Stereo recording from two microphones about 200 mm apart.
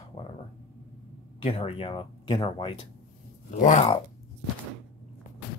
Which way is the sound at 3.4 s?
40° left (ahead or behind).